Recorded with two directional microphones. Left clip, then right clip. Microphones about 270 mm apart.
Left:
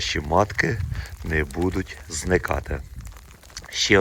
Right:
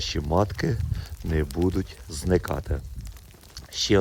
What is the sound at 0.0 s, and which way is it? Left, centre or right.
Speech, centre.